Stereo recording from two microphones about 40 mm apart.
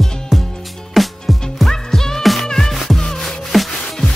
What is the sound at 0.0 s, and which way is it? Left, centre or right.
Music, centre.